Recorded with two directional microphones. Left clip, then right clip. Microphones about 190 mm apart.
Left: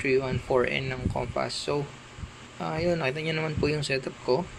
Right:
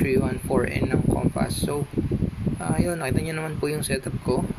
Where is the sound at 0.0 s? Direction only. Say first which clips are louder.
Right 2 dB; 5° right (ahead or behind).